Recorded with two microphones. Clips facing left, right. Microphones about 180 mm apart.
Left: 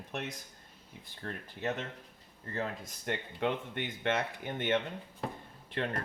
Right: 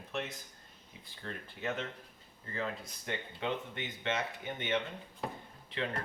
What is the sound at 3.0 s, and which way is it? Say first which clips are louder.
Speech: left 4 dB; 55° left (ahead or behind).